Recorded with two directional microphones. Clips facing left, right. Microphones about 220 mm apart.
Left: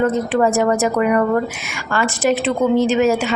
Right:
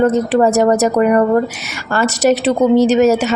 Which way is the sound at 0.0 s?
40° right (ahead or behind).